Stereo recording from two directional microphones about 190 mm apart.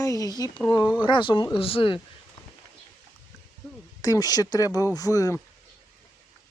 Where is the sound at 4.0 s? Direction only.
20° left (ahead or behind).